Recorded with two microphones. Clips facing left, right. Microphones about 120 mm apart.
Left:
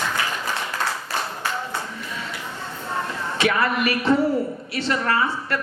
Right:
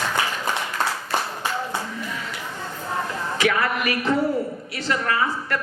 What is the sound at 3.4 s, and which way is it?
A man's voice, 30° left (ahead or behind).